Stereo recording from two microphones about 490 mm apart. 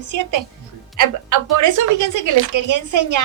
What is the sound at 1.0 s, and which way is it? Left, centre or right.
A woman's voice, right.